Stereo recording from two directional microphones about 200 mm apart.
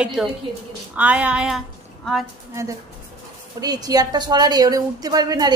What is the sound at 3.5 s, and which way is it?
A woman's voice, 20° right (ahead or behind).